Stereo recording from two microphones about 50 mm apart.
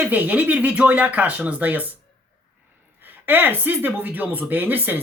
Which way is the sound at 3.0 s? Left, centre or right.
Right.